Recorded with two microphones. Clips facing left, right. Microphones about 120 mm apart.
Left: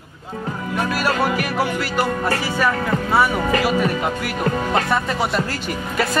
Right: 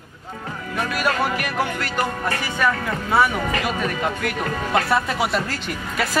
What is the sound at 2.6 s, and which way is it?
Speech, 5° left (ahead or behind).